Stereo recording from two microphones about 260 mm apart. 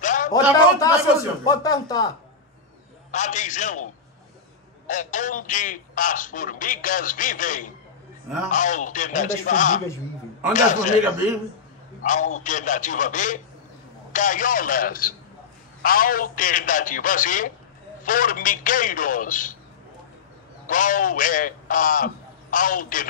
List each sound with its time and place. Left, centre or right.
0.0 s a sound: left
0.3 s speech: centre
3.1 s a man's voice: left
12.0 s a man's voice: left
20.6 s a man's voice: left